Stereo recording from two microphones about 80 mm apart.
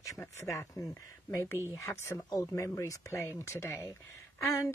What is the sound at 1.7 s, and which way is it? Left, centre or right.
Speech, left.